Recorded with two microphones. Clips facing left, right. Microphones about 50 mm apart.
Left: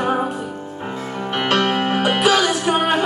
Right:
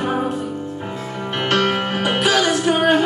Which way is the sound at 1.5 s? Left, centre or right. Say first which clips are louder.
Even; centre.